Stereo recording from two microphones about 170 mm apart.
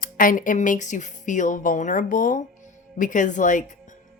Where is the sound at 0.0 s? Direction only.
55° left (ahead or behind).